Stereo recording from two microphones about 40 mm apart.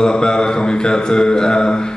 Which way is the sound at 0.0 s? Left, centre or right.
Centre.